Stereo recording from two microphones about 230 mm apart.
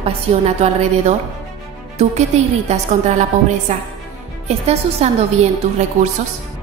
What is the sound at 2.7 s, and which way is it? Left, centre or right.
A woman's voice, right.